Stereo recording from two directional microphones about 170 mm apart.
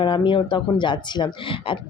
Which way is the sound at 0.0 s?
30° left (ahead or behind).